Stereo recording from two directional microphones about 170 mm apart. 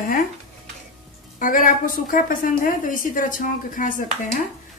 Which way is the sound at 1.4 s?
55° left (ahead or behind).